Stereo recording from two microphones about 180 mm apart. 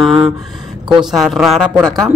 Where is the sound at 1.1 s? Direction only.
Centre (ahead or behind).